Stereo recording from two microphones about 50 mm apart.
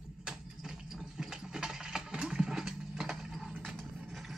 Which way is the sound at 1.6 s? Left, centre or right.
Centre.